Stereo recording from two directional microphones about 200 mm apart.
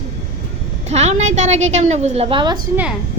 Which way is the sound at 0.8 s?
35° right (ahead or behind).